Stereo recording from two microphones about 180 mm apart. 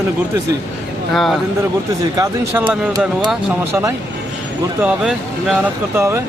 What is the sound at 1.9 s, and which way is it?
Speech, 20° right (ahead or behind).